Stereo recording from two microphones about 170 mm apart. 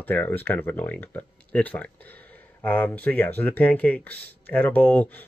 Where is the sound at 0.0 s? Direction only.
10° left (ahead or behind).